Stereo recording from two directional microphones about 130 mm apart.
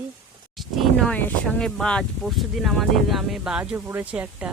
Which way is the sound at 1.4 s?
5° left (ahead or behind).